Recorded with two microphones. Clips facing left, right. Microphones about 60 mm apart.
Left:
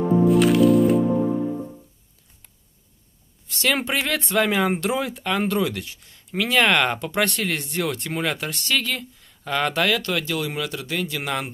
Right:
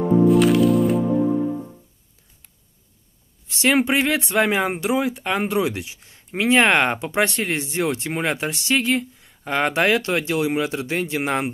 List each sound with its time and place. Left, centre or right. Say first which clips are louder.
0.3 s music: left 2 dB; centre
3.4 s speech: right 5 dB; centre
5.9 s speech: right 1 dB; right
7.0 s speech: right 2 dB; centre; by 11.5 s right